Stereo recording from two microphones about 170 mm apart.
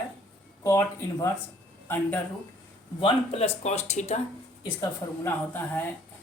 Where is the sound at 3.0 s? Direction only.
35° left (ahead or behind).